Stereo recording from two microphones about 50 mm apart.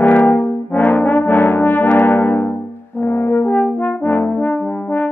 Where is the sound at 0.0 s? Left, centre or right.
Left.